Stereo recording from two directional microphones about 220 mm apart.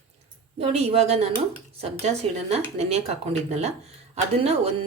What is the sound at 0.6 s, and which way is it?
Speech, 30° right (ahead or behind).